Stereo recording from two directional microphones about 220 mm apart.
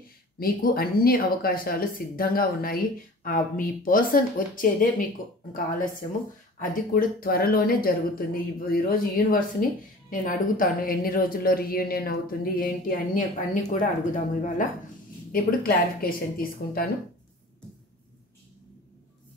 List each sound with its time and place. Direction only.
0.4 s a woman's voice: 40° left (ahead or behind)